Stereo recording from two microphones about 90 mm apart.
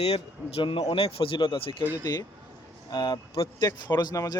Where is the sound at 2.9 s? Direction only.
65° left (ahead or behind); by 3.5 s 80° left.